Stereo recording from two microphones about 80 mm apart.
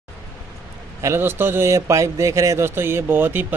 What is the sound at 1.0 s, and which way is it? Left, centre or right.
A man's voice, right.